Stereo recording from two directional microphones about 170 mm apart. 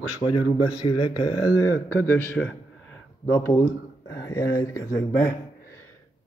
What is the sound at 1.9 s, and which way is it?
Speech, 15° left (ahead or behind).